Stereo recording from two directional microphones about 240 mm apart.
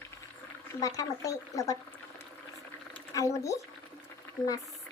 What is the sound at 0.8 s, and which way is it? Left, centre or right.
Speech, centre.